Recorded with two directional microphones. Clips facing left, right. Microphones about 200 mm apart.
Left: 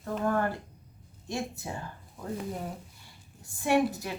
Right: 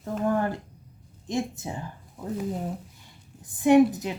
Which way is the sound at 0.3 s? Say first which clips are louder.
Right 3 dB; 15° right (ahead or behind).